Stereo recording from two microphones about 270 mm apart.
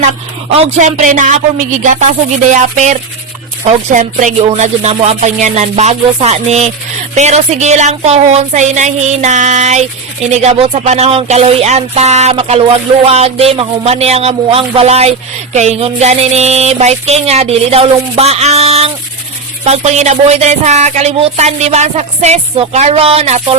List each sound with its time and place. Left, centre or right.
0.5 s music: right